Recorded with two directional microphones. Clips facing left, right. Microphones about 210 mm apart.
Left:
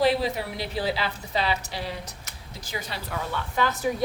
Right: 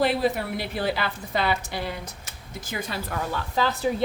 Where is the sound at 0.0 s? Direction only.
50° right (ahead or behind).